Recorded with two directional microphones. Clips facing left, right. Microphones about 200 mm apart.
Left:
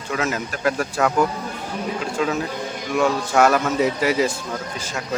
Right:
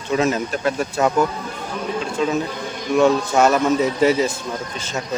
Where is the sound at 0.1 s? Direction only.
25° right (ahead or behind).